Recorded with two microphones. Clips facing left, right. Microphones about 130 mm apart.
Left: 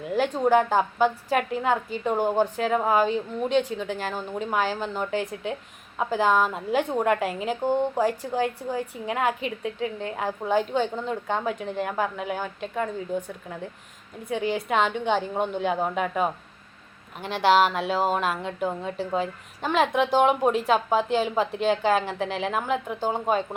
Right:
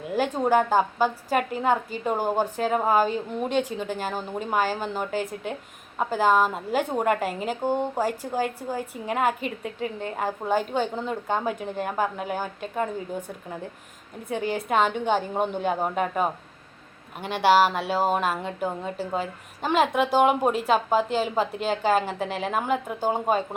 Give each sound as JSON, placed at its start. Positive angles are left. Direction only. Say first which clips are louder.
{"t": 0.4, "sound": "a woman's voice", "louder": "even", "side_deg": 0}
{"t": 14.3, "sound": "a woman's voice", "louder": "left 1 dB", "side_deg": 0}
{"t": 17.4, "sound": "a woman's voice", "louder": "right 1 dB", "side_deg": -5}